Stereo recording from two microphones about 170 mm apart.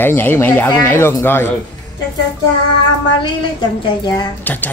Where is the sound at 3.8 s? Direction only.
25° left (ahead or behind).